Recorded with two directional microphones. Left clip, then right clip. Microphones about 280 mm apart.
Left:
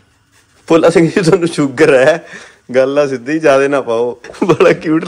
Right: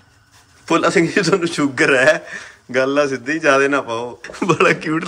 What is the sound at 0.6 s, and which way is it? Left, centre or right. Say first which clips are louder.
A man's voice: left 7 dB; centre.